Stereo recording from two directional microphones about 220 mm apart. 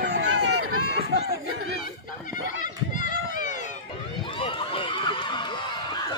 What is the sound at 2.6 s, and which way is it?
Run, 35° left (ahead or behind).